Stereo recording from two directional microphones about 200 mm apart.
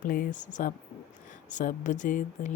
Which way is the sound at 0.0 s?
40° left (ahead or behind).